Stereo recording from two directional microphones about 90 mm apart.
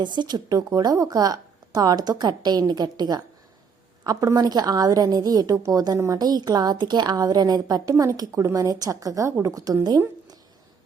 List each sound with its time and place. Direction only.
0.0 s a woman's voice: 55° right (ahead or behind); by 9.7 s 40° right (ahead or behind)